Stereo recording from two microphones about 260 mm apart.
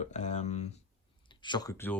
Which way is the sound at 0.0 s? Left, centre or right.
Left.